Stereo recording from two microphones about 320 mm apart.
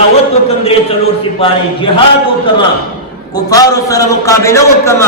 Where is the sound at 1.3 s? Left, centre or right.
Centre.